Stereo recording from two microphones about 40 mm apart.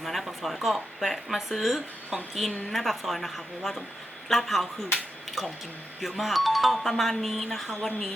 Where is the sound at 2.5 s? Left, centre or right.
Centre.